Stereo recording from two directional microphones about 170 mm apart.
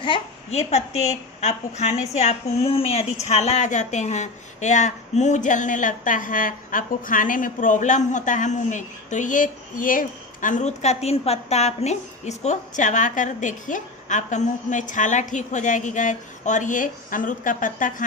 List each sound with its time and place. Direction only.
0.0 s a woman's voice: 35° left (ahead or behind); by 18.0 s 50° left (ahead or behind)